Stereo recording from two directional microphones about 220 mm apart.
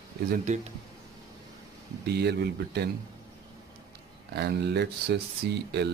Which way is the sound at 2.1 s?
45° right (ahead or behind).